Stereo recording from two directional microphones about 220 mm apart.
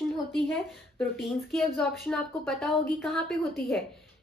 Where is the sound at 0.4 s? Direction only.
Centre (ahead or behind).